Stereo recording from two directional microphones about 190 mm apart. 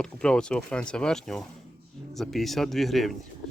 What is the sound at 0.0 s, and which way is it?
Speech, 5° left (ahead or behind).